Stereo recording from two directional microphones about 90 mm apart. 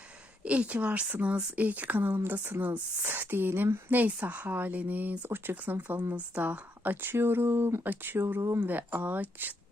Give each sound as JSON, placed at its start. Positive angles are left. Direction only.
{"t": 0.4, "sound": "speech", "side_deg": -15}
{"t": 8.7, "sound": "speech", "side_deg": -20}